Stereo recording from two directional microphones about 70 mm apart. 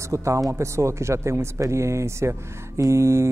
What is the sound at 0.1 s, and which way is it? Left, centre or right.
A woman's voice, right.